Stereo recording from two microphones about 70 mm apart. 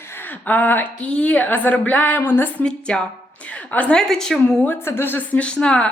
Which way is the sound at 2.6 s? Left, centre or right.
Centre.